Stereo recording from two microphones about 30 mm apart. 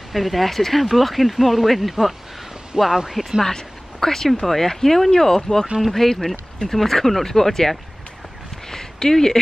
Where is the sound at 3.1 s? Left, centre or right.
Centre.